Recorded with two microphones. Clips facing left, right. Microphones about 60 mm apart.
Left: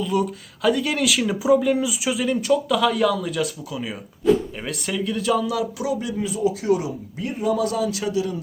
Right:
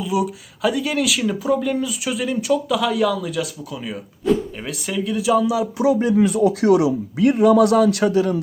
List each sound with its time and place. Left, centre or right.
0.0 s speech: centre
5.7 s speech: right
6.1 s speech: right